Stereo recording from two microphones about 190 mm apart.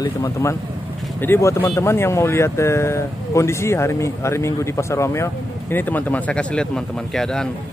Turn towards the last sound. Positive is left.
turn(degrees=5)  # may be behind; listen again after turning